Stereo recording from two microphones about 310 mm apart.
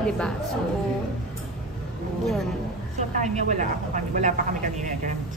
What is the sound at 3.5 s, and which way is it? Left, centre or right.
Speech, right.